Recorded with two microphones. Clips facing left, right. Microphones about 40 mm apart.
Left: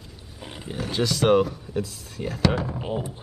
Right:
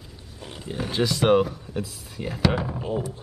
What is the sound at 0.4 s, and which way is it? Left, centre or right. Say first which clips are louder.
Roaring cats: right 1 dB; centre.